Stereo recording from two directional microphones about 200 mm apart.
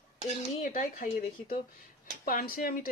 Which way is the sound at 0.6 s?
40° left (ahead or behind).